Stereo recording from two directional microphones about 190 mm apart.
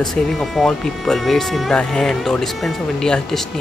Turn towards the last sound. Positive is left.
turn(degrees=5)  # may be behind; listen again after turning